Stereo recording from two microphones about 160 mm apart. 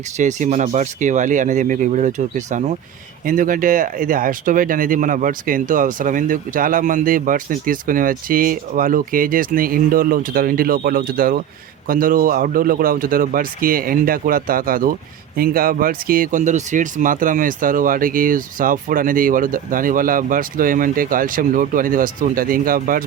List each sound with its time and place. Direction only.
0.2 s speech: 50° right (ahead or behind)